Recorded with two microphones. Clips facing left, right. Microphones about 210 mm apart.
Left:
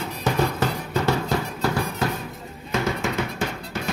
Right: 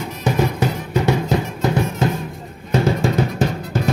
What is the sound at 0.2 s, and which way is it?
Music, 15° right (ahead or behind).